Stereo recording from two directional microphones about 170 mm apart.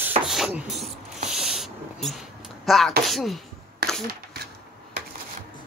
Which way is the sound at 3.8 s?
70° right (ahead or behind).